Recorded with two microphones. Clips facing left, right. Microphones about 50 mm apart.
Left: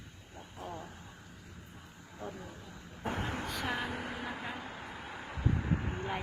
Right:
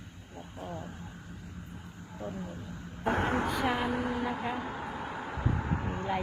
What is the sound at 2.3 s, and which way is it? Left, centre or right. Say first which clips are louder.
Speech: right 5 dB; right.